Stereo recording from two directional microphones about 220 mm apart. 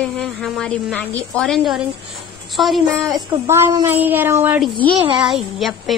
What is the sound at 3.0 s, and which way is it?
A woman's voice, 10° right (ahead or behind).